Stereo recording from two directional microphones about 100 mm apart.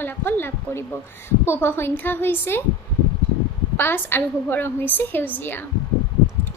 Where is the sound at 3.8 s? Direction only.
20° left (ahead or behind).